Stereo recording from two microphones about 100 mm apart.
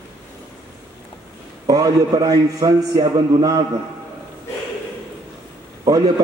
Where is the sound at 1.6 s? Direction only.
40° right (ahead or behind).